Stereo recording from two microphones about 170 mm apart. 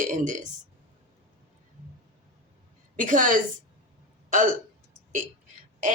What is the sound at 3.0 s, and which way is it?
Speech, 50° right (ahead or behind).